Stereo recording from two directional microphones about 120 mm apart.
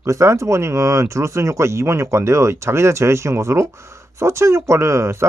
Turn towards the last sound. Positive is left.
turn(degrees=-25)  # may be behind; listen again after turning